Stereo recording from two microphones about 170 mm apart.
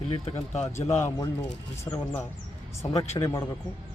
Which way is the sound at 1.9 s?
10° left (ahead or behind).